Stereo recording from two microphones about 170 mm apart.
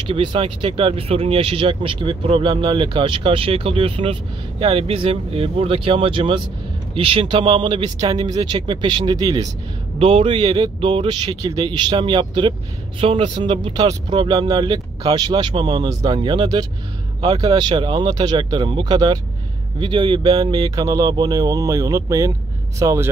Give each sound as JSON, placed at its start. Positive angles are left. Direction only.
{"t": 0.0, "sound": "speech", "side_deg": -30}
{"t": 9.9, "sound": "speech", "side_deg": -35}